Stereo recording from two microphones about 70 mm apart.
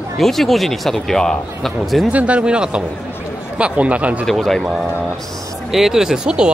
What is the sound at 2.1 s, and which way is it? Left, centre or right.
Speech, centre.